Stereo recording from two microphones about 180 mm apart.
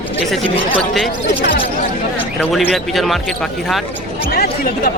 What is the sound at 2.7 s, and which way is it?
Speech, centre (ahead or behind).